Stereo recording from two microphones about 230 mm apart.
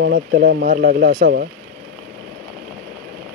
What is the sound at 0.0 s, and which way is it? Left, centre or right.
Speech, right.